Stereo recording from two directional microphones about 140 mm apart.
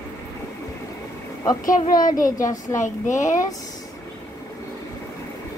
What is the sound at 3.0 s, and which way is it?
Speech, 60° left (ahead or behind).